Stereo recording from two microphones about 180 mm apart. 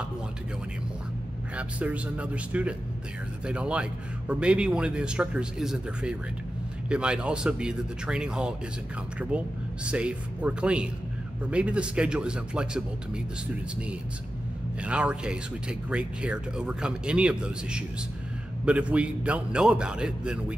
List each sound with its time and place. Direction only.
1.6 s speech: 5° right (ahead or behind)
14.8 s speech: 5° right (ahead or behind)